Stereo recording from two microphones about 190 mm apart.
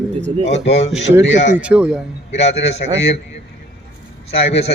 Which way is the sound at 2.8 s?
50° left (ahead or behind).